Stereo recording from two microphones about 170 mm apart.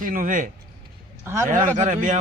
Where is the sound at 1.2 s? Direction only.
15° right (ahead or behind).